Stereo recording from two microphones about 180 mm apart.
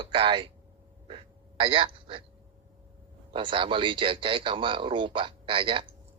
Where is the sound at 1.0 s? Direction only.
25° right (ahead or behind).